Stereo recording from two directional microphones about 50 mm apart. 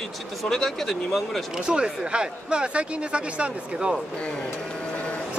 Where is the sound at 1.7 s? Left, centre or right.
Centre.